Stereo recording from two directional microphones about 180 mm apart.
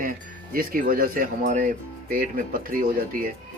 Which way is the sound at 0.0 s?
50° right (ahead or behind).